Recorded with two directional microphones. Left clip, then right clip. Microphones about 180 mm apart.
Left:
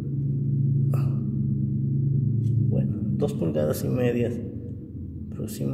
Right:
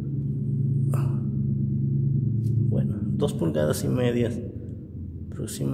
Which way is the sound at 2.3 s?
20° right (ahead or behind).